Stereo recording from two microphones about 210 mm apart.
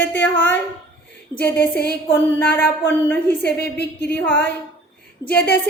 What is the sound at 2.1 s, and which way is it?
A woman's voice, 10° left (ahead or behind).